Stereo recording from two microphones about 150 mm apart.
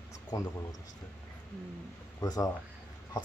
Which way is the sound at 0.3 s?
25° left (ahead or behind).